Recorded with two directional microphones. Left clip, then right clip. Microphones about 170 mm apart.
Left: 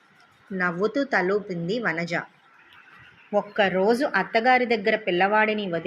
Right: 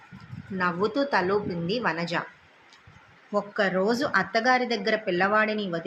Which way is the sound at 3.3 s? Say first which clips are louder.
Left 3 dB; 15° left (ahead or behind).